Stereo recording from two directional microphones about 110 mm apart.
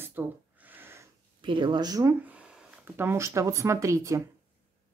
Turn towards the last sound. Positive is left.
turn(degrees=-30)  # may be behind; listen again after turning